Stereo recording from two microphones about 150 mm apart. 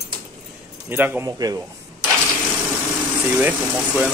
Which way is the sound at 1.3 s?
25° right (ahead or behind).